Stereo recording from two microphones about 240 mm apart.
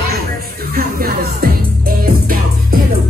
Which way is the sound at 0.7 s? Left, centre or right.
Right.